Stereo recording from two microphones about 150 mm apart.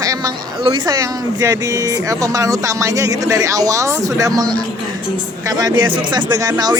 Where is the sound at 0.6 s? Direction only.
35° right (ahead or behind).